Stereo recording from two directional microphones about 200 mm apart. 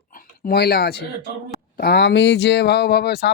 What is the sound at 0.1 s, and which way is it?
Speech, 45° left (ahead or behind).